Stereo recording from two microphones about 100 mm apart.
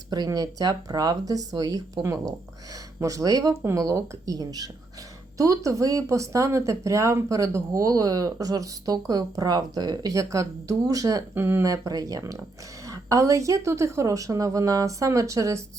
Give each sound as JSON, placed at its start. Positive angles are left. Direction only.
{"t": 0.3, "sound": "speech", "side_deg": -35}
{"t": 11.3, "sound": "speech", "side_deg": -20}
{"t": 11.6, "sound": "speech", "side_deg": -35}